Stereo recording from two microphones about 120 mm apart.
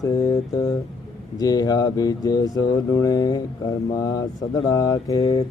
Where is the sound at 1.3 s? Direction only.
30° left (ahead or behind).